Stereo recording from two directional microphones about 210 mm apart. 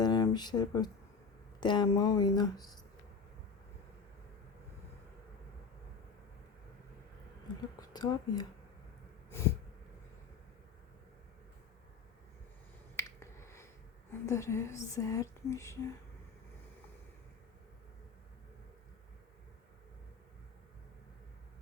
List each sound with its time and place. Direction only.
0.0 s a sound: 20° left (ahead or behind)
1.6 s speech: 20° left (ahead or behind)
7.8 s speech: 20° left (ahead or behind)
13.0 s finger snapping: 15° left (ahead or behind)
14.3 s speech: 15° left (ahead or behind)